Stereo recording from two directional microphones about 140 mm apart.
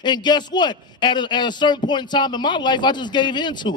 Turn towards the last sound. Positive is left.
turn(degrees=35)  # may be behind; listen again after turning